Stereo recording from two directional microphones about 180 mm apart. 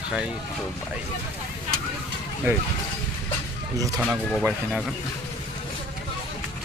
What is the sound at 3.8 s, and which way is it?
Speech, 20° right (ahead or behind).